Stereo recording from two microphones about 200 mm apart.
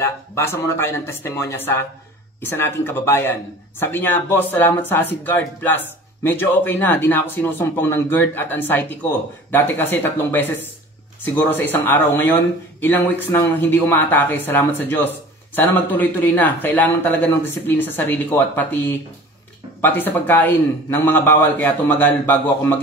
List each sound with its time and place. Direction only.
0.0 s speech: 10° left (ahead or behind)